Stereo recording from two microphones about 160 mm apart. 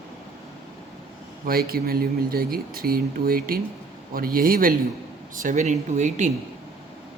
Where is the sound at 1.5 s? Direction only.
70° right (ahead or behind); by 6.3 s 50° right (ahead or behind).